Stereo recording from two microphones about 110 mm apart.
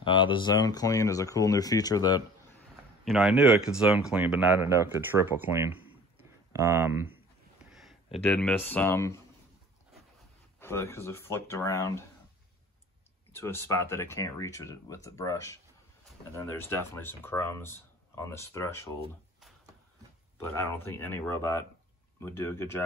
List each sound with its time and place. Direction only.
0.0 s speech: 50° left (ahead or behind)
3.1 s speech: 5° right (ahead or behind)
4.6 s speech: 25° right (ahead or behind)
7.7 s a sound: centre (ahead or behind)
8.2 s speech: 10° left (ahead or behind); by 9.2 s 25° left (ahead or behind)
10.6 s speech: 25° left (ahead or behind)
13.3 s speech: 25° left (ahead or behind)
20.3 s speech: 25° left (ahead or behind)